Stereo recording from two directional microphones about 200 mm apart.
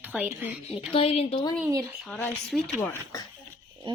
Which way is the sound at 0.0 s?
5° right (ahead or behind).